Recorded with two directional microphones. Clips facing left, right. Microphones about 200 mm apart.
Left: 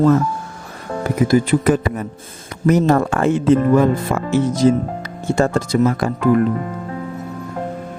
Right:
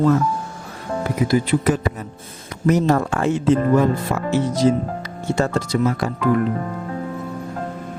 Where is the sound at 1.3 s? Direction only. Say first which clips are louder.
Left 4 dB; 50° left (ahead or behind).